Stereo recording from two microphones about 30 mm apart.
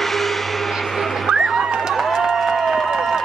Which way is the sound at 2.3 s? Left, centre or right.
Centre.